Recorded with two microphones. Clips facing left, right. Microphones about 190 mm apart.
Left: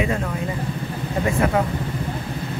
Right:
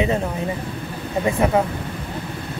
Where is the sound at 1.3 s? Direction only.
20° right (ahead or behind).